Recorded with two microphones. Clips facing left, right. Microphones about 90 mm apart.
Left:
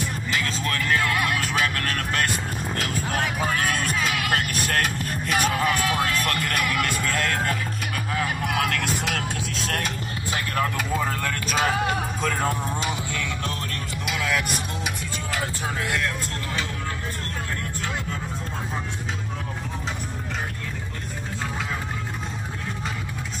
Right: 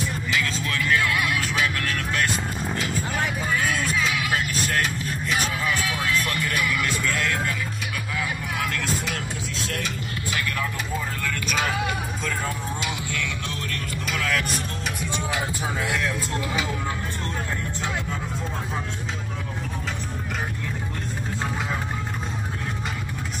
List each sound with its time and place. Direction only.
0.3 s music: 40° left (ahead or behind)
2.7 s vehicle: 55° left (ahead or behind)
8.2 s vehicle: 65° left (ahead or behind)
9.7 s music: 55° left (ahead or behind)
11.1 s vehicle: 35° left (ahead or behind); by 12.5 s 55° left (ahead or behind)
12.8 s music: 35° left (ahead or behind)
14.0 s music: 15° left (ahead or behind)
15.8 s music: centre (ahead or behind)